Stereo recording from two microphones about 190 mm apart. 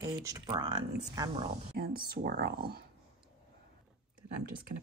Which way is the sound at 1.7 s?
50° right (ahead or behind).